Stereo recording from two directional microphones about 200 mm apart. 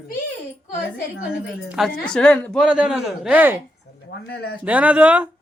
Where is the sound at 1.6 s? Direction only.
Centre (ahead or behind).